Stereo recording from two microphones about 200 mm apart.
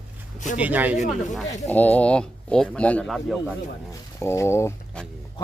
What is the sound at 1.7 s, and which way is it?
Speech, 10° left (ahead or behind).